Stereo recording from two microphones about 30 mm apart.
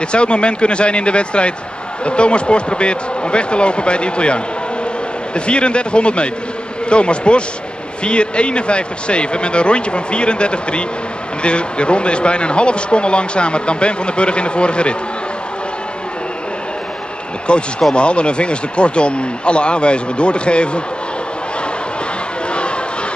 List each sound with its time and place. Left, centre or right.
0.1 s speech: left
17.5 s speech: left